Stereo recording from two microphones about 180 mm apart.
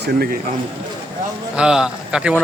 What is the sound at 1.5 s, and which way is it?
Speech, 5° right (ahead or behind).